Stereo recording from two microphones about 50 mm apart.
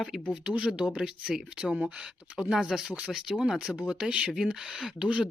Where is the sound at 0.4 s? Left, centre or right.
Centre.